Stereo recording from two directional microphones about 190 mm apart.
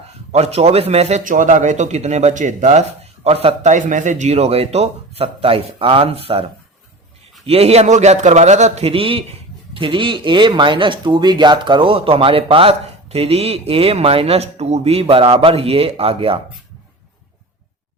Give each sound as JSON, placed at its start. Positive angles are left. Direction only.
{"t": 0.3, "sound": "a man's voice", "side_deg": -35}
{"t": 7.4, "sound": "a man's voice", "side_deg": -30}